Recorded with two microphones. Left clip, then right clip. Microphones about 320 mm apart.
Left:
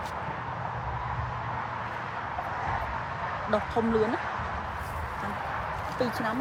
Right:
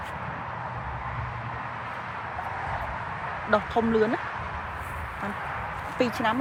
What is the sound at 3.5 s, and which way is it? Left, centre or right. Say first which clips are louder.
Speech: right 4 dB; right.